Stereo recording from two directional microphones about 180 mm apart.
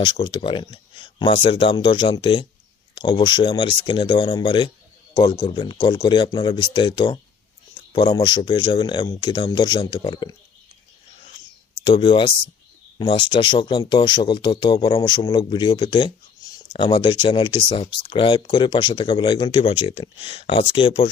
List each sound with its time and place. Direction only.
0.0 s speech: 25° left (ahead or behind)
11.9 s speech: 25° left (ahead or behind)